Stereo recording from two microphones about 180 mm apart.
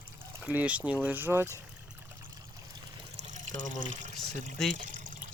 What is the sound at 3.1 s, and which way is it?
Speech, 40° right (ahead or behind).